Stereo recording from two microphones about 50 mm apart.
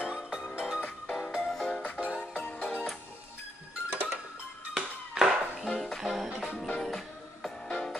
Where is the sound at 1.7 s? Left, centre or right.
Left.